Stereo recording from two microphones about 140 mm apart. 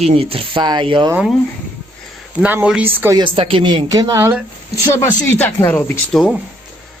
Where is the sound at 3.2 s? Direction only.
40° right (ahead or behind).